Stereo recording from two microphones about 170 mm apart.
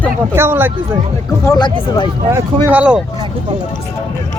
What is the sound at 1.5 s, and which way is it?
Speech, 25° left (ahead or behind).